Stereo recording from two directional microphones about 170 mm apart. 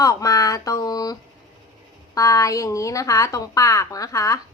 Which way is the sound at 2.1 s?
20° left (ahead or behind).